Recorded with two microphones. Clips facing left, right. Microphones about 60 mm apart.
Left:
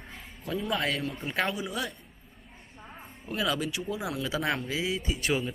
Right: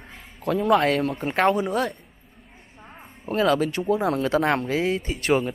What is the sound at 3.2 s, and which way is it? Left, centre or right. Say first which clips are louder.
Speech: right 9 dB; right.